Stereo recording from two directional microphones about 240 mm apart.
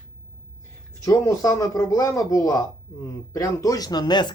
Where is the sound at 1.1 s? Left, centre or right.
Centre.